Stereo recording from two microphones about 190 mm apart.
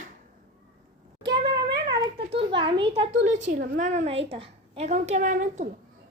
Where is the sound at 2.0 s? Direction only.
25° right (ahead or behind).